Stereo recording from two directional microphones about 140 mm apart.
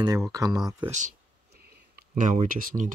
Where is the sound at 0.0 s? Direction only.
25° right (ahead or behind).